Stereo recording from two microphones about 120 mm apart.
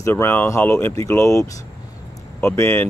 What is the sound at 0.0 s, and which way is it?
Speech, 20° left (ahead or behind).